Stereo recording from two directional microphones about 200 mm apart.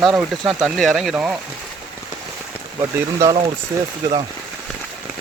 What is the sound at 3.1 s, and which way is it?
Speech, 15° right (ahead or behind).